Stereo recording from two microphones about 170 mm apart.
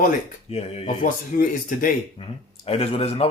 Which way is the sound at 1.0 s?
55° left (ahead or behind).